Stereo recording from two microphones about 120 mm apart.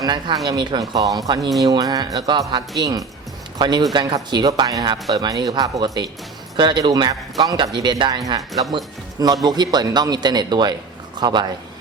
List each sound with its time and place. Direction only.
0.0 s speech: 40° right (ahead or behind)
1.4 s speech: centre (ahead or behind)
1.6 s speech: 30° right (ahead or behind)
9.2 s speech: 35° right (ahead or behind)